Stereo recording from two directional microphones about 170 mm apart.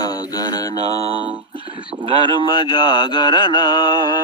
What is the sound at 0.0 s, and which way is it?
Mantra, 20° left (ahead or behind).